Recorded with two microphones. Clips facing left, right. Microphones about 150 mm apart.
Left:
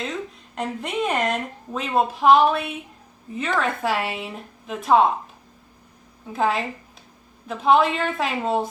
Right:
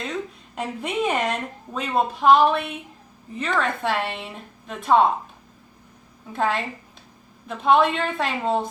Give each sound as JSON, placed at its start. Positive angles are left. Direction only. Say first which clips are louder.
{"t": 0.5, "sound": "a woman's voice", "louder": "even", "side_deg": 0}
{"t": 6.3, "sound": "a woman's voice", "louder": "left 1 dB", "side_deg": 0}